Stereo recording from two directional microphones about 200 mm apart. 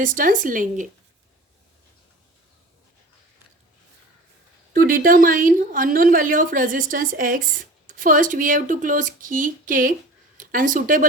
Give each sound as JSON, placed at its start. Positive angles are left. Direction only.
{"t": 0.0, "sound": "speech", "side_deg": -40}
{"t": 4.7, "sound": "a woman's voice", "side_deg": -45}